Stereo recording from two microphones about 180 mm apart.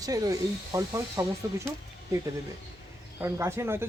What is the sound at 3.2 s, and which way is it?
Speech, 15° right (ahead or behind).